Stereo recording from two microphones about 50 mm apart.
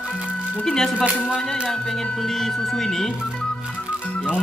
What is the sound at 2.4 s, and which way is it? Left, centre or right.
Speech, centre.